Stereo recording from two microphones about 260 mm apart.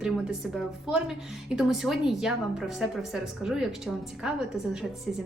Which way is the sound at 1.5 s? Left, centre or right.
Centre.